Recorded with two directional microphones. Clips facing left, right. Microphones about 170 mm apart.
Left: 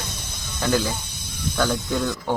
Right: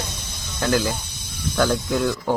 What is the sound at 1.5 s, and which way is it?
Speech, 5° right (ahead or behind).